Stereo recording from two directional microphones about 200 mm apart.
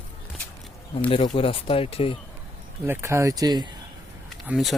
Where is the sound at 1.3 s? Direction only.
25° left (ahead or behind).